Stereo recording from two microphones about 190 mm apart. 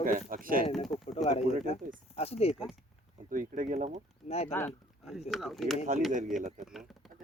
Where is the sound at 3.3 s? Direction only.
45° right (ahead or behind).